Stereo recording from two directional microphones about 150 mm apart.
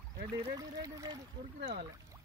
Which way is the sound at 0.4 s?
25° right (ahead or behind).